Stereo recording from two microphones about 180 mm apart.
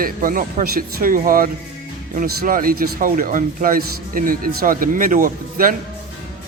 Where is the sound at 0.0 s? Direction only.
50° right (ahead or behind).